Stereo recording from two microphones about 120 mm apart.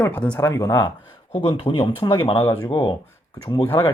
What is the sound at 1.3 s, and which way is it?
Speech, 40° left (ahead or behind).